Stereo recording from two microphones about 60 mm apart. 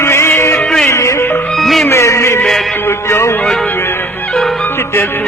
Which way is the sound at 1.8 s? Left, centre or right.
Left.